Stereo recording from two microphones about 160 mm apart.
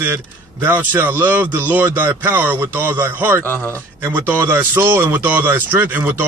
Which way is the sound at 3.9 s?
15° right (ahead or behind).